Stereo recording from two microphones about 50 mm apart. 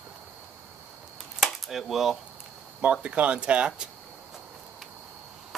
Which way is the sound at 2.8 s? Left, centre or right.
Right.